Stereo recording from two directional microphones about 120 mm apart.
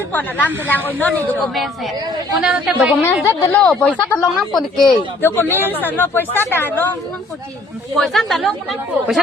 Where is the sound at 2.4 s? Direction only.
10° right (ahead or behind).